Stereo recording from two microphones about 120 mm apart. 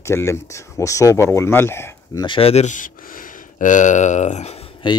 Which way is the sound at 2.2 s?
50° left (ahead or behind).